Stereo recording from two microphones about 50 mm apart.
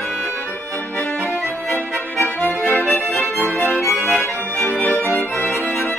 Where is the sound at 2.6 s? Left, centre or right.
Left.